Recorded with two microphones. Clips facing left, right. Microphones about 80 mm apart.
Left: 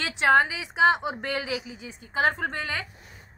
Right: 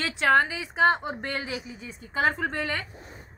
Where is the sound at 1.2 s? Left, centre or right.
Left.